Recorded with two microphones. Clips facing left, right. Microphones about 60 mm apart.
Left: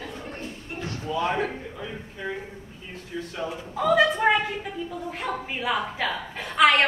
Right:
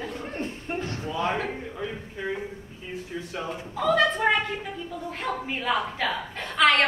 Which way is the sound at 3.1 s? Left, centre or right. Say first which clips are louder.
Left 4 dB; centre.